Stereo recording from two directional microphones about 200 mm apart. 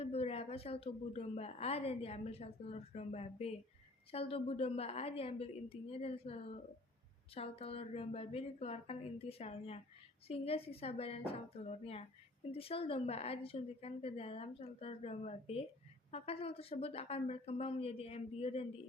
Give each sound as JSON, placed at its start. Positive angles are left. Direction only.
{"t": 0.0, "sound": "a woman's voice", "side_deg": 30}